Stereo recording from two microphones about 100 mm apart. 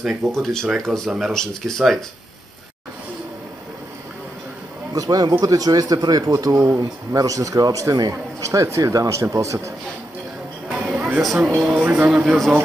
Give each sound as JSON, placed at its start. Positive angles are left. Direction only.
{"t": 0.0, "sound": "speech", "side_deg": 5}
{"t": 4.9, "sound": "a man's voice", "side_deg": -40}
{"t": 10.7, "sound": "music", "side_deg": -5}
{"t": 11.3, "sound": "speech", "side_deg": -10}
{"t": 12.3, "sound": "speech", "side_deg": 0}